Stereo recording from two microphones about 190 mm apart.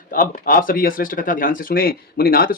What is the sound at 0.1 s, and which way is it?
Speech, 50° left (ahead or behind).